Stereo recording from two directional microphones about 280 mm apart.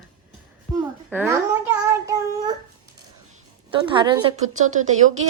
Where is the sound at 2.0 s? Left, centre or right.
Centre.